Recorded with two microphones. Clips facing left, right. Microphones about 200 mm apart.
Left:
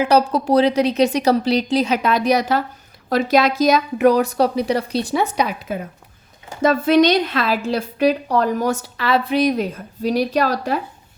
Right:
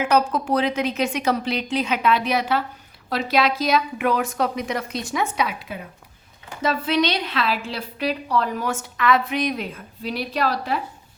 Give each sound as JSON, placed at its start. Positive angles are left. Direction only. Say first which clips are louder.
{"t": 0.0, "sound": "a woman's voice", "louder": "left 4 dB", "side_deg": 35}